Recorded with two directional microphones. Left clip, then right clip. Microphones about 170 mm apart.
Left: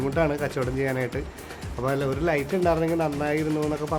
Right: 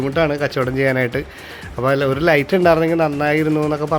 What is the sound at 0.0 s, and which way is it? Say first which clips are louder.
Speech: right 7 dB; 25° right (ahead or behind).